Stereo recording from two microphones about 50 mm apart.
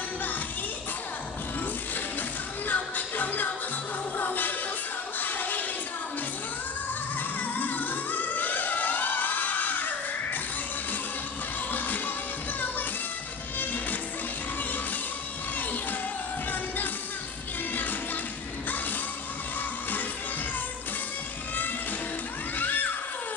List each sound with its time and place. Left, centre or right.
2.7 s music: left
7.3 s music: left
11.7 s music: left
22.6 s music: left